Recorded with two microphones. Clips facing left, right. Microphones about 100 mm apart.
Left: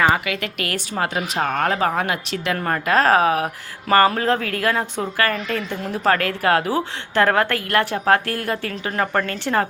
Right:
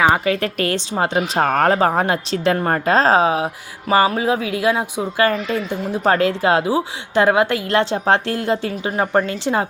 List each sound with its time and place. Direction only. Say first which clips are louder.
0.3 s a woman's voice: right 7 dB; 35° right (ahead or behind)
1.4 s speech: right 5 dB; 40° right (ahead or behind); by 3.5 s 20° right (ahead or behind)
3.8 s a woman's voice: even; 5° right (ahead or behind)